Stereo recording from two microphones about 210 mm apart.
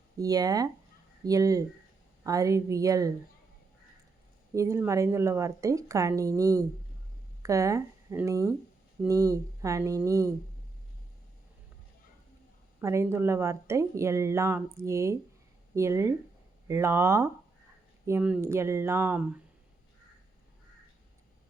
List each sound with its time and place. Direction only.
0.2 s speech: 15° right (ahead or behind)
4.5 s speech: 15° right (ahead or behind)
12.8 s speech: 15° right (ahead or behind)